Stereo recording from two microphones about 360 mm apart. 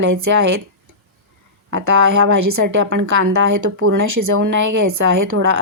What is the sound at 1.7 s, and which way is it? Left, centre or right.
A woman's voice, right.